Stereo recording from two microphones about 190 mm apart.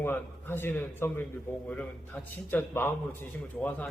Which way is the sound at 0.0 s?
10° left (ahead or behind).